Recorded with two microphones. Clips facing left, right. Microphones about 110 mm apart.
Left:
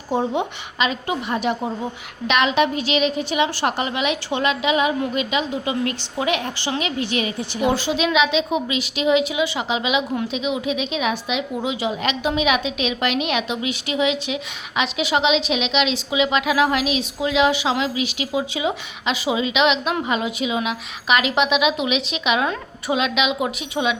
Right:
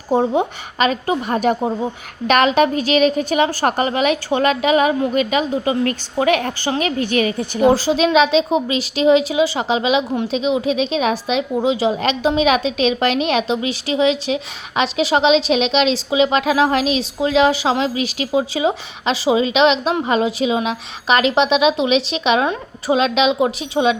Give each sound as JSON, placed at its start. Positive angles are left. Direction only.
{"t": 0.1, "sound": "a woman's voice", "side_deg": -35}
{"t": 7.6, "sound": "a woman's voice", "side_deg": -35}